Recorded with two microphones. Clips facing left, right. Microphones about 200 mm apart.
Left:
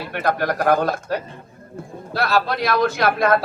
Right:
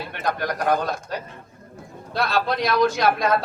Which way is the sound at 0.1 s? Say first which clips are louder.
Left 6 dB; 55° left (ahead or behind).